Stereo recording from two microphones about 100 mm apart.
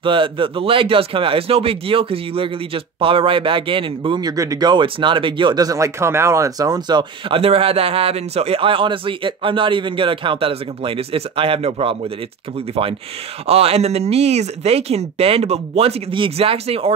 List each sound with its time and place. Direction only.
0.0 s speech: 60° right (ahead or behind)
4.2 s speech: 35° right (ahead or behind); by 5.6 s 55° right (ahead or behind)
5.6 s speech: 35° right (ahead or behind)
7.3 s a man's voice: 70° right (ahead or behind)
13.5 s speech: 85° right